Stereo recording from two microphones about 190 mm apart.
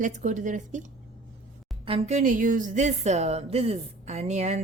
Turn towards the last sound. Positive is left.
turn(degrees=-35)  # may be behind; listen again after turning